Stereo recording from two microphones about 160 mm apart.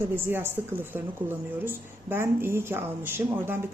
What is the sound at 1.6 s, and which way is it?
A woman's voice, 15° right (ahead or behind).